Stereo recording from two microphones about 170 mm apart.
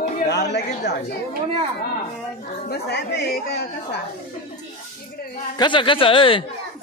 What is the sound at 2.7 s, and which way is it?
A woman's voice, 80° left.